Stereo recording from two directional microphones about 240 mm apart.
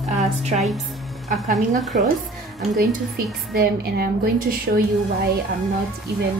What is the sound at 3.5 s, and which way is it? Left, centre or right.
A woman's voice, right.